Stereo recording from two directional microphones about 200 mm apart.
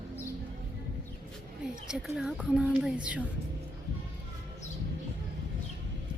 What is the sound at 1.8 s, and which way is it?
Speech, centre (ahead or behind).